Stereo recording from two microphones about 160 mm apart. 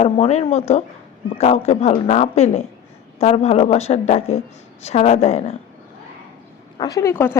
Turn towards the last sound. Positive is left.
turn(degrees=15)  # may be behind; listen again after turning